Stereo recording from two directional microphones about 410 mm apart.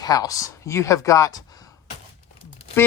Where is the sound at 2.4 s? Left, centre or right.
Centre.